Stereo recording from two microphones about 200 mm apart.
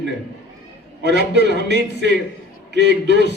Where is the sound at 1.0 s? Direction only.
60° right (ahead or behind).